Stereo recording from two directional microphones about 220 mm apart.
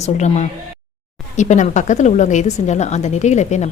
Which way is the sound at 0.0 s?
30° left (ahead or behind).